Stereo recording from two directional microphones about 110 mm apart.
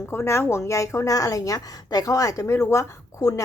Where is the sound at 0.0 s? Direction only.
25° left (ahead or behind).